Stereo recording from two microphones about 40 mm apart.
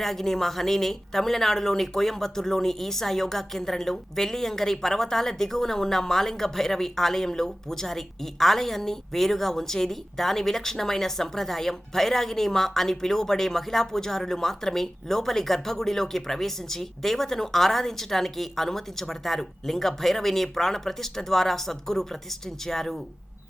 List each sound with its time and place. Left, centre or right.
0.0 s a woman's voice: centre